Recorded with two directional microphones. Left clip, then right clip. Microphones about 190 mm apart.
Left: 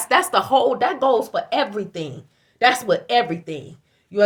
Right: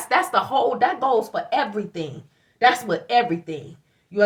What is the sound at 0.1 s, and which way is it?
Speech, 60° left (ahead or behind).